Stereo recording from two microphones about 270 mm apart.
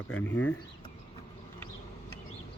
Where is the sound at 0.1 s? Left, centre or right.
Left.